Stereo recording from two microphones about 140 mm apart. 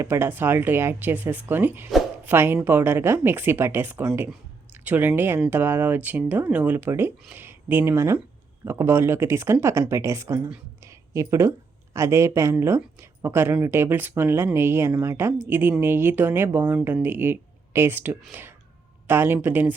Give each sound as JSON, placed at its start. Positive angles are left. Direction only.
{"t": 0.0, "sound": "speech", "side_deg": -15}
{"t": 10.8, "sound": "a sound", "side_deg": -20}
{"t": 11.9, "sound": "speech", "side_deg": -20}